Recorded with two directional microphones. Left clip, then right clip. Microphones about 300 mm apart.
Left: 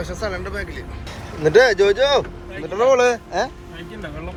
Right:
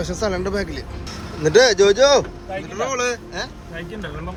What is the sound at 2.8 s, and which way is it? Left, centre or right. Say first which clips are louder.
Speech: left 8 dB; centre.